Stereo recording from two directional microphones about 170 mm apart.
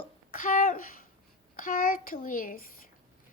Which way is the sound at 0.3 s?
55° left (ahead or behind).